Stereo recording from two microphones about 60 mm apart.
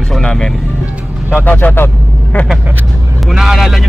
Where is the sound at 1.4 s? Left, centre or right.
Left.